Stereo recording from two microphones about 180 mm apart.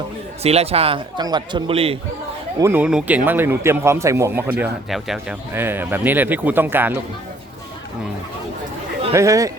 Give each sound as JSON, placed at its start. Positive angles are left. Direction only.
{"t": 0.4, "sound": "a man's voice", "side_deg": -35}
{"t": 2.6, "sound": "a man's voice", "side_deg": -10}
{"t": 5.5, "sound": "a man's voice", "side_deg": -10}
{"t": 9.1, "sound": "a man's voice", "side_deg": -15}